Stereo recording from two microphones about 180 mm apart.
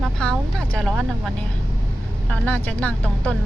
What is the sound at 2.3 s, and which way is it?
Speech, 10° left (ahead or behind).